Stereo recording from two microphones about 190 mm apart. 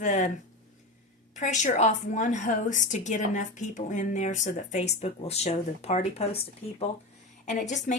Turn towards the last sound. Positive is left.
turn(degrees=40)  # may be behind; listen again after turning